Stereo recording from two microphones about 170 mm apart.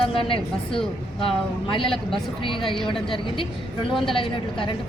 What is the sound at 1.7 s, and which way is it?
Speech, 30° left (ahead or behind).